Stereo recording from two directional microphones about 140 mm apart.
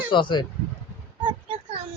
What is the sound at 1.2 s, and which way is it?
Child singing, 40° right (ahead or behind).